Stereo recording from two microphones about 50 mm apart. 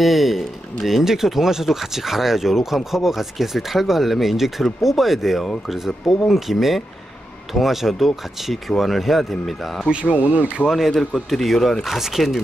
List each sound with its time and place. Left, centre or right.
0.0 s speech: centre
10.0 s speech: left
10.6 s speech: left
11.2 s speech: centre